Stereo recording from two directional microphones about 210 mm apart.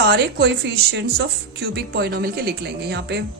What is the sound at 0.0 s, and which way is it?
Speech, 55° right (ahead or behind).